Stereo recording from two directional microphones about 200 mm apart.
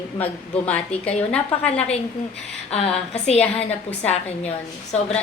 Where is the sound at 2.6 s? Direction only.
30° left (ahead or behind).